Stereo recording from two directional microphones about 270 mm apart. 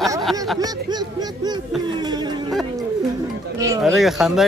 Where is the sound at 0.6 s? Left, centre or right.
Centre.